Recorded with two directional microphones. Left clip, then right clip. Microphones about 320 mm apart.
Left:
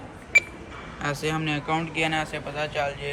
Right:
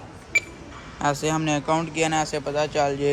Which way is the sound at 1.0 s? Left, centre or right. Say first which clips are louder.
Right 4 dB; centre.